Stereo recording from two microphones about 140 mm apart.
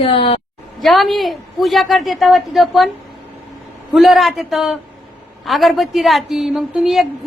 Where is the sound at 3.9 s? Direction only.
Centre (ahead or behind).